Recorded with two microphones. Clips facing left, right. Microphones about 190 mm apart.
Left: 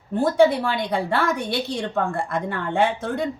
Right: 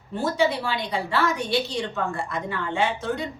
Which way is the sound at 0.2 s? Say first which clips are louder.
Left 6 dB; 55° left (ahead or behind).